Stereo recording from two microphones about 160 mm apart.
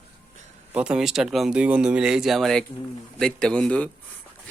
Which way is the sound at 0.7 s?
5° right (ahead or behind).